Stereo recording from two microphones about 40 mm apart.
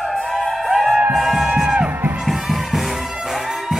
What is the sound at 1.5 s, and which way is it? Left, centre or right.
Music, centre.